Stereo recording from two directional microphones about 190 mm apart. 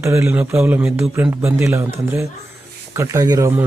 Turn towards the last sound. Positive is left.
turn(degrees=-15)  # may be behind; listen again after turning